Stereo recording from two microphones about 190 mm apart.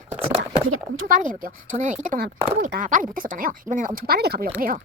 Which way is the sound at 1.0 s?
45° right (ahead or behind).